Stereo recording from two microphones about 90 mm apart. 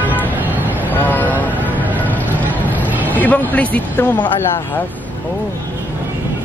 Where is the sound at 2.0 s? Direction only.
20° left (ahead or behind).